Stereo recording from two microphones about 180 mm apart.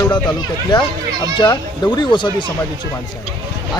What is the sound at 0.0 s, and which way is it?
Speech, 25° left (ahead or behind).